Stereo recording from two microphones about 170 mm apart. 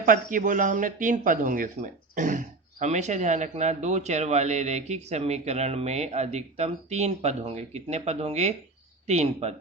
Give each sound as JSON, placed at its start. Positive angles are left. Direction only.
{"t": 0.0, "sound": "speech", "side_deg": -55}